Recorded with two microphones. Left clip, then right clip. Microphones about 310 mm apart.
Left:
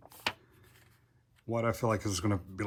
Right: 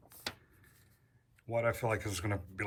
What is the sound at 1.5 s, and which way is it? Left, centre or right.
Speech, centre.